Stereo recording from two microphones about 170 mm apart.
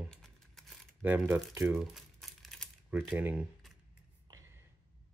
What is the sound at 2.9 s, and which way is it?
Speech, 10° right (ahead or behind).